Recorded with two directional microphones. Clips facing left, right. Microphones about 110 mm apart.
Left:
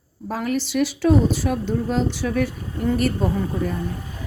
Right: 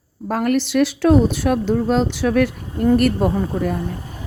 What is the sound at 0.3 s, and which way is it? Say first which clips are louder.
Speech: right 5 dB; 60° right (ahead or behind).